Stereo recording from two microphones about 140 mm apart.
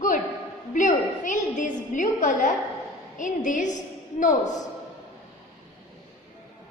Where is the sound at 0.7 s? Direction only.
65° left (ahead or behind).